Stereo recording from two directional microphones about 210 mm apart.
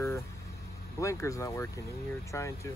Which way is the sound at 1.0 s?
15° left (ahead or behind).